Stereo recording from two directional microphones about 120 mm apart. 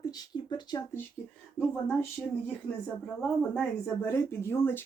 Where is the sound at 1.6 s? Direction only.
20° left (ahead or behind).